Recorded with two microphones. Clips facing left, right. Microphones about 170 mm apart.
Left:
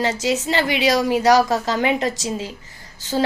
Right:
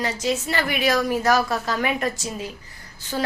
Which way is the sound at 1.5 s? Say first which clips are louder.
Left 4 dB; 25° left (ahead or behind).